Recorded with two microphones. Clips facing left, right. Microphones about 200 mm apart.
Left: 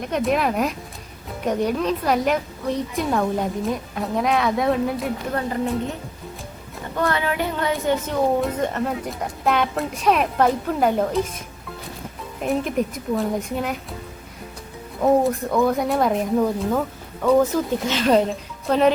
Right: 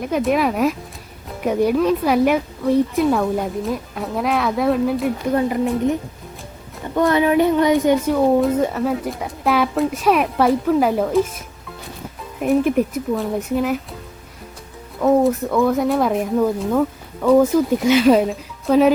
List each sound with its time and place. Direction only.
0.1 s a woman's voice: centre (ahead or behind)
7.1 s a woman's voice: 20° right (ahead or behind); by 11.2 s centre (ahead or behind)
12.4 s a woman's voice: 5° right (ahead or behind)
15.2 s a woman's voice: centre (ahead or behind)
17.2 s speech: 10° right (ahead or behind)